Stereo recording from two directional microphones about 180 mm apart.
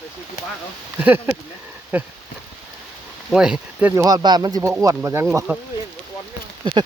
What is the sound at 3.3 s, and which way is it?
Speech, 5° right (ahead or behind).